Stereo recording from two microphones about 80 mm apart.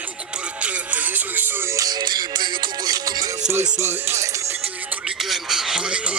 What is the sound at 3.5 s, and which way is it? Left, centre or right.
Music, right.